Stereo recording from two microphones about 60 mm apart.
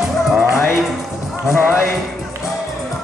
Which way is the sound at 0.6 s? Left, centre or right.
Left.